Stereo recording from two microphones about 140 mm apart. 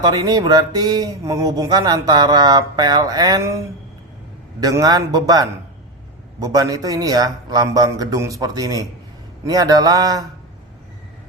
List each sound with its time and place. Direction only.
0.0 s speech: 30° right (ahead or behind)